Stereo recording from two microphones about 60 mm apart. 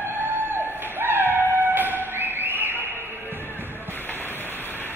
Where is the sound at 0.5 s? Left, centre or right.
Right.